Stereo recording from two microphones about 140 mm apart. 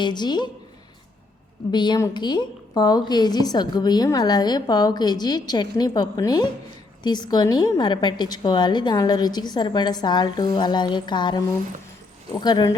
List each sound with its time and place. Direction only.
0.0 s a woman's voice: 30° left (ahead or behind)
1.7 s a woman's voice: 30° left (ahead or behind)